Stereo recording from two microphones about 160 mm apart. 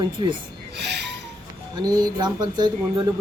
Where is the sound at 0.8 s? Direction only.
90° right.